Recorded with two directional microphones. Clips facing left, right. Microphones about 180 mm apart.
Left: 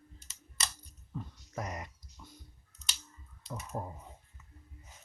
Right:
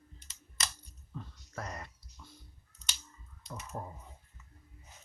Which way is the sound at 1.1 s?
15° left (ahead or behind).